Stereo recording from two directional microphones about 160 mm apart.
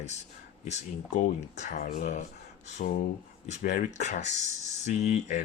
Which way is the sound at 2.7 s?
60° left (ahead or behind).